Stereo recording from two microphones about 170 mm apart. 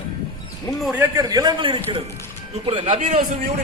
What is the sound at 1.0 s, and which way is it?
A man's voice, 25° right (ahead or behind).